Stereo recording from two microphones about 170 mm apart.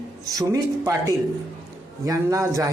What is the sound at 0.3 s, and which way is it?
A man's voice, 20° right (ahead or behind).